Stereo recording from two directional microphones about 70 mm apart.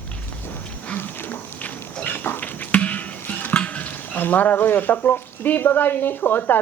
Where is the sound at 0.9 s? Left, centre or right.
Left.